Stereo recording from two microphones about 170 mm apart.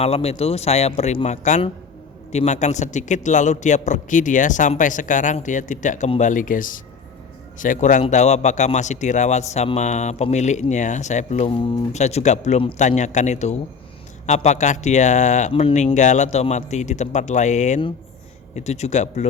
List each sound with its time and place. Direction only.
0.0 s a man's voice: 35° left (ahead or behind)
11.9 s speech: 40° left (ahead or behind)